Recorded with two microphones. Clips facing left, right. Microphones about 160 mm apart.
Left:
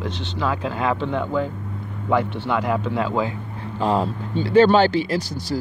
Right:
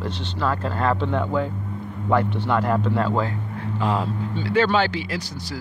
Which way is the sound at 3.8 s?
35° left (ahead or behind).